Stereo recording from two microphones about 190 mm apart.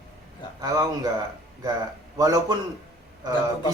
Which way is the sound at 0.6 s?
20° right (ahead or behind).